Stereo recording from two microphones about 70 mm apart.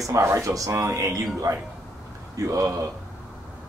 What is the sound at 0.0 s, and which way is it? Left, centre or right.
Speech, right.